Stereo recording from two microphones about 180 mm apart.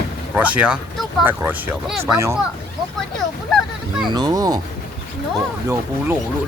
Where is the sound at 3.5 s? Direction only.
Centre (ahead or behind).